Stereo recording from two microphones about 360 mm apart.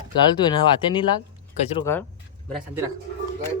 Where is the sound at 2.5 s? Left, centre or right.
Centre.